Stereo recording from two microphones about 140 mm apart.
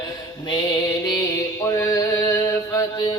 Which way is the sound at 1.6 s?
25° left (ahead or behind).